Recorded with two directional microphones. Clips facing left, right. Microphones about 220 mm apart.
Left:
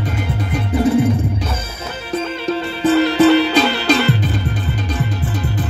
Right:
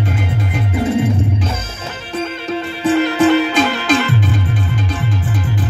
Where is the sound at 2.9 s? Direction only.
35° left (ahead or behind).